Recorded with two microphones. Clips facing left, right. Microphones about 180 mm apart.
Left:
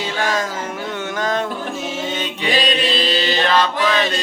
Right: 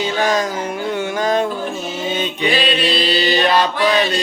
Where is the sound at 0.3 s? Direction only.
15° right (ahead or behind).